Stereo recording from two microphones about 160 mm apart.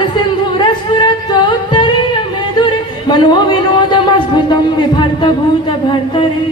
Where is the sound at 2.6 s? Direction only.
30° left (ahead or behind).